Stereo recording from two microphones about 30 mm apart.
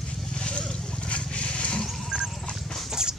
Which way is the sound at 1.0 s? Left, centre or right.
Left.